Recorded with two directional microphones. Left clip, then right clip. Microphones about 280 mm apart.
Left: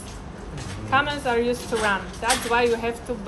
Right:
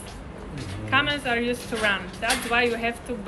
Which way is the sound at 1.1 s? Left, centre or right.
Left.